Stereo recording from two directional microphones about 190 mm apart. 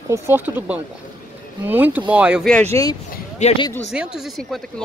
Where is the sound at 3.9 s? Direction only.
5° right (ahead or behind).